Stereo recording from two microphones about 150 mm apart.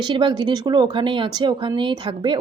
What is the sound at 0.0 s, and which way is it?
A woman's voice, 30° right (ahead or behind).